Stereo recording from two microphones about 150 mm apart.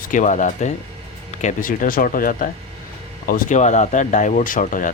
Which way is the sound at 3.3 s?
55° left (ahead or behind).